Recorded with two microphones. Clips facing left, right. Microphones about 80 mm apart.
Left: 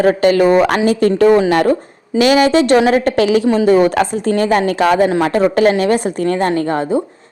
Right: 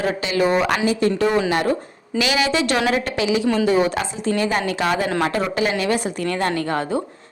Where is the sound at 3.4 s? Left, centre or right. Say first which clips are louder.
Left 6 dB; left.